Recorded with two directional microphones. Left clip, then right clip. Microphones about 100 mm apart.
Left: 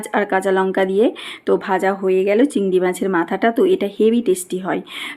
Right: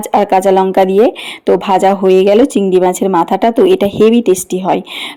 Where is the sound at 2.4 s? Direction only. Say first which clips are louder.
Right 7 dB; 50° right (ahead or behind).